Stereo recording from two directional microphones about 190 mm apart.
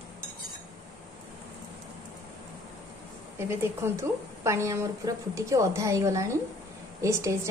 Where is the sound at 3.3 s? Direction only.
15° right (ahead or behind).